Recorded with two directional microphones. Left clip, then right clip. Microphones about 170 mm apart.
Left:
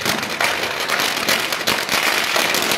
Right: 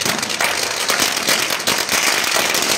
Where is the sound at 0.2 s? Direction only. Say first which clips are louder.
Right 1 dB; centre (ahead or behind).